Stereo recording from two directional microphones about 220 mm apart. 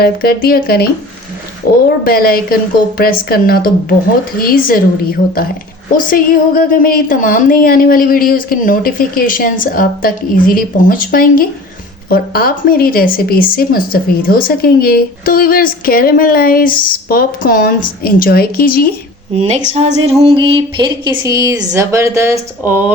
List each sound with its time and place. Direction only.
0.0 s speech: 45° left (ahead or behind)
2.0 s a woman's voice: 40° left (ahead or behind)
19.4 s a woman's voice: 30° right (ahead or behind); by 22.8 s 10° right (ahead or behind)